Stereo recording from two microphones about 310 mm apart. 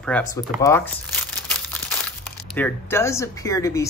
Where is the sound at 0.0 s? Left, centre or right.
Centre.